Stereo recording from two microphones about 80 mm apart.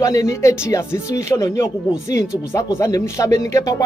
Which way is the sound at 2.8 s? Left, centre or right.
Left.